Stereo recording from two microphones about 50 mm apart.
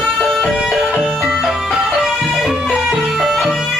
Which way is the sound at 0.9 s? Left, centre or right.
Right.